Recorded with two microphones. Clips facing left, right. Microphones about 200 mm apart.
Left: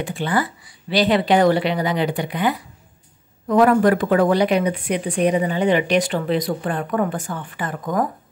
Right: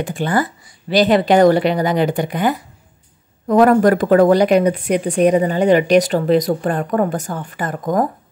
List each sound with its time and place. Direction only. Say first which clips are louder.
0.0 s speech: right 3 dB; 45° right (ahead or behind)